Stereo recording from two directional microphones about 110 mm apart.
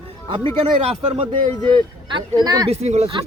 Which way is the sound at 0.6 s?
75° right (ahead or behind).